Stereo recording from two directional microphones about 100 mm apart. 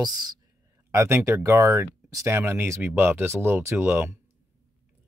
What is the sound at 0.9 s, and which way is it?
Speech, 25° right (ahead or behind).